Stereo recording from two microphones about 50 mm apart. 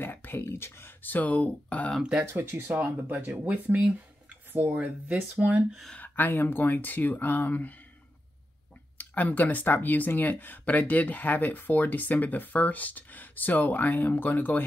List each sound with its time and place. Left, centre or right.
0.0 s speech: left
1.0 s speech: left
2.2 s speech: right
2.5 s speech: right
4.5 s speech: right
4.7 s speech: right
5.9 s speech: left
8.9 s speech: left